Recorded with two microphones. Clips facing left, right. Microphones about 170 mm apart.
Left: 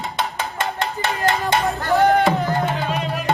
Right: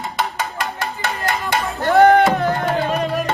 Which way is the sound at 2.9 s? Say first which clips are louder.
Right 4 dB; 40° right (ahead or behind).